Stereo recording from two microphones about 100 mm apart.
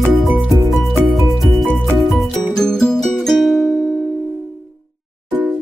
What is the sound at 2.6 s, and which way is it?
Music, 5° left (ahead or behind).